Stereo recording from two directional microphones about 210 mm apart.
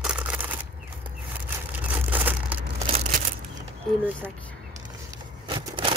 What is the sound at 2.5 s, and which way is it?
Crumpling, 5° right (ahead or behind).